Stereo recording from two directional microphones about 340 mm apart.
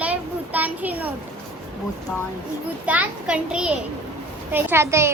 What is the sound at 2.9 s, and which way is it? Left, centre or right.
A woman's voice, centre.